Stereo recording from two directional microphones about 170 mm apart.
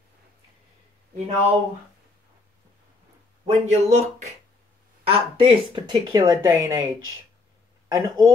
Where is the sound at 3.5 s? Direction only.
40° right (ahead or behind).